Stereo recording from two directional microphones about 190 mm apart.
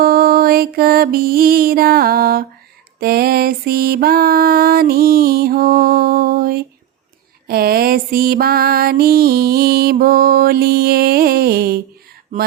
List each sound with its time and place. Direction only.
0.0 s music: 50° right (ahead or behind)